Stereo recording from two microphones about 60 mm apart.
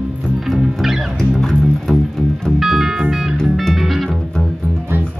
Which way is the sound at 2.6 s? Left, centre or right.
Centre.